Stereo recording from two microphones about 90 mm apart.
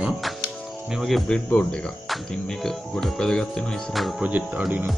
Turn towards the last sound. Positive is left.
turn(degrees=-15)  # may be behind; listen again after turning